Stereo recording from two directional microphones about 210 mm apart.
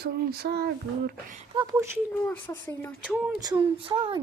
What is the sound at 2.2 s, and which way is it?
Speech, 15° left (ahead or behind).